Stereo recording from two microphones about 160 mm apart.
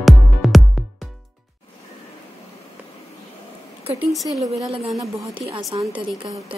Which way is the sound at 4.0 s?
Centre (ahead or behind).